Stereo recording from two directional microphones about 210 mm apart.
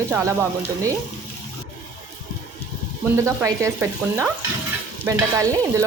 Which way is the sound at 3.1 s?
15° right (ahead or behind).